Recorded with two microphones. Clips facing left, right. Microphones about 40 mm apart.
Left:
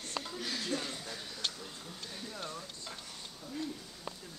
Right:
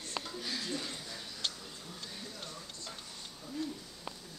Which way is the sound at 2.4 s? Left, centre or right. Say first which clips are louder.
Left 3 dB; left.